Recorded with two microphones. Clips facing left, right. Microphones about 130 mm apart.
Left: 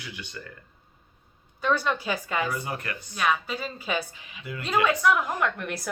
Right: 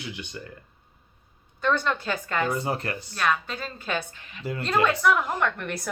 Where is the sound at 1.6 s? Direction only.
5° left (ahead or behind).